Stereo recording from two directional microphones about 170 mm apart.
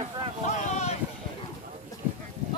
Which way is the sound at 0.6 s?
40° left (ahead or behind).